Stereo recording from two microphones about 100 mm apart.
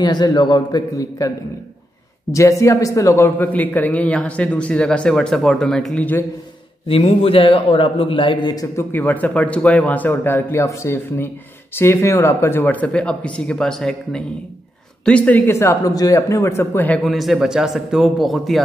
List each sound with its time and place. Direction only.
0.0 s a man's voice: 45° left (ahead or behind)
2.3 s a man's voice: 30° left (ahead or behind); by 6.0 s 5° left (ahead or behind)
6.9 s a man's voice: 80° left; by 8.5 s 55° left (ahead or behind)
9.0 s a man's voice: 15° left (ahead or behind)
15.9 s a man's voice: 35° left (ahead or behind); by 17.0 s 20° left (ahead or behind)
17.0 s a man's voice: centre (ahead or behind)